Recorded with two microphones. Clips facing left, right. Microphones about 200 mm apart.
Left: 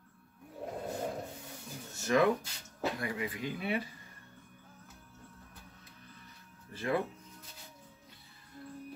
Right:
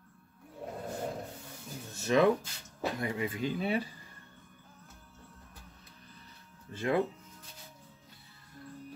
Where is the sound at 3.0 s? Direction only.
25° right (ahead or behind).